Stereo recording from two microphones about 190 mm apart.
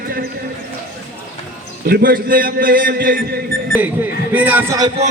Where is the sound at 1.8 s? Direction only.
50° right (ahead or behind).